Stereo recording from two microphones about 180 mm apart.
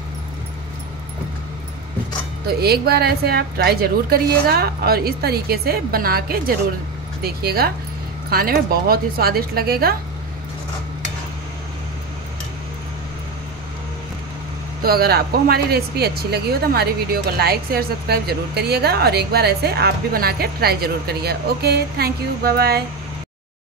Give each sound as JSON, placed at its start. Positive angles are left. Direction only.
{"t": 2.4, "sound": "speech", "side_deg": -60}
{"t": 14.8, "sound": "speech", "side_deg": -60}